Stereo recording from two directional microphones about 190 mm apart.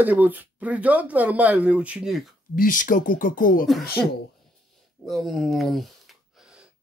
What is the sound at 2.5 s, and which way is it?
Speech, 45° left (ahead or behind).